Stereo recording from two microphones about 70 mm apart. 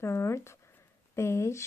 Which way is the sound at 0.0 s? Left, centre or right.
Left.